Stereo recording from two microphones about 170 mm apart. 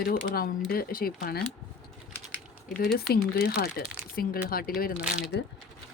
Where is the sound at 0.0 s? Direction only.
60° left (ahead or behind).